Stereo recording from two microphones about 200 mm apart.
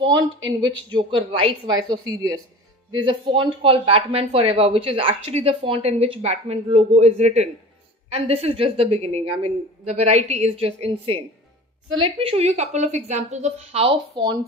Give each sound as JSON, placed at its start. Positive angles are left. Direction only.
{"t": 0.5, "sound": "a woman's voice", "side_deg": -20}